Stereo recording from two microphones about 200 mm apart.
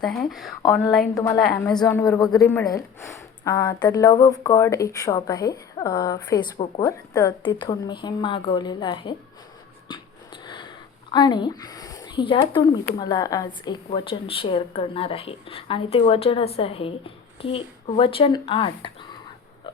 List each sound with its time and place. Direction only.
0.0 s speech: centre (ahead or behind)
1.1 s a woman's voice: 15° left (ahead or behind)
1.4 s speech: 5° left (ahead or behind)
1.8 s a woman's voice: 15° left (ahead or behind)
10.4 s a sound: 20° left (ahead or behind)
11.1 s a woman's voice: 20° left (ahead or behind)